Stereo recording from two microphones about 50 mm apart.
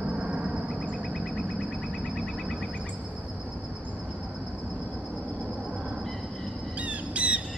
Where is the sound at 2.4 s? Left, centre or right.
Centre.